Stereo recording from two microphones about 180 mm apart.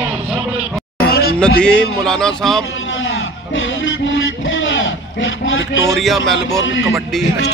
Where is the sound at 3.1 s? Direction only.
90° left.